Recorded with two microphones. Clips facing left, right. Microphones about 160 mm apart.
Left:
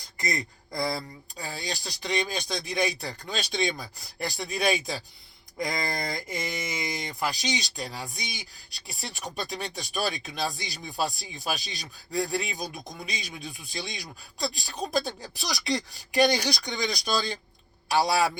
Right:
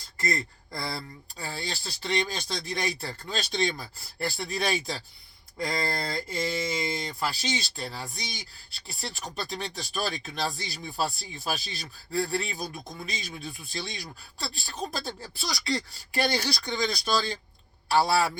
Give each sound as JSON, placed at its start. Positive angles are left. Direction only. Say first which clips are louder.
{"t": 0.2, "sound": "speech", "louder": "right 1 dB", "side_deg": 15}